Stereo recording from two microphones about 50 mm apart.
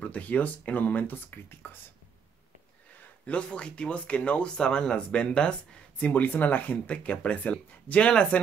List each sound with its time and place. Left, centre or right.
0.0 s speech: left
3.3 s speech: left
5.9 s speech: left